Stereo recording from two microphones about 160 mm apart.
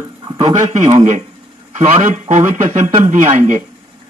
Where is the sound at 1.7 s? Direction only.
45° right (ahead or behind).